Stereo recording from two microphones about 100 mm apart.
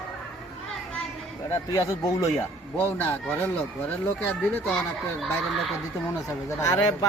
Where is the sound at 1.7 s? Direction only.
35° left (ahead or behind).